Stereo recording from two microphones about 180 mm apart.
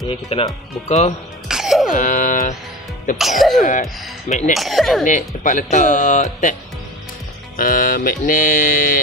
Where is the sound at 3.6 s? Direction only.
45° left (ahead or behind).